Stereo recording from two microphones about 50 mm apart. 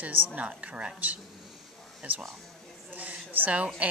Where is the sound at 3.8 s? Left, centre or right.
Right.